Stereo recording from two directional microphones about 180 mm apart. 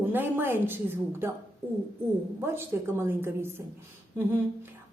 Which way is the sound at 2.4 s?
15° right (ahead or behind).